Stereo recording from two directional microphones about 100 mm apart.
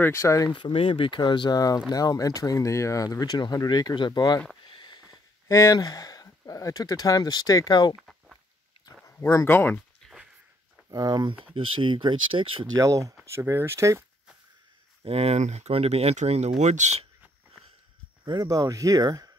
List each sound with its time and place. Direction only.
0.0 s speech: 30° left (ahead or behind)
0.7 s speech: 70° left (ahead or behind); by 4.4 s 45° left (ahead or behind)
4.6 s a sound: 50° left (ahead or behind)
5.5 s speech: 30° left (ahead or behind)
7.9 s a sound: 5° right (ahead or behind)
9.0 s speech: 30° left (ahead or behind)
10.9 s speech: 45° right (ahead or behind)
11.4 s speech: 60° right (ahead or behind)
12.7 s speech: 30° right (ahead or behind)
15.0 s speech: 90° right
18.2 s speech: 45° right (ahead or behind)